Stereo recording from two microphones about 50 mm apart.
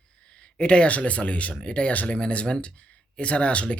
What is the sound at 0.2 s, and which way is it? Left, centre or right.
Speech, left.